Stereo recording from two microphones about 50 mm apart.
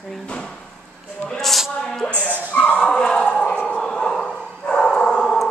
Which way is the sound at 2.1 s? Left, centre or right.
Right.